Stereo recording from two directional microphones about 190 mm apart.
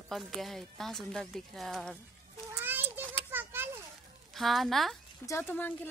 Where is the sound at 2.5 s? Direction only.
10° right (ahead or behind).